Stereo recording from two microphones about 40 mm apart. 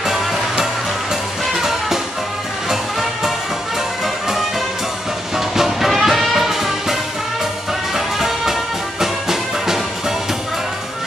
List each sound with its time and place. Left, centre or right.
0.0 s music: centre
5.6 s music: centre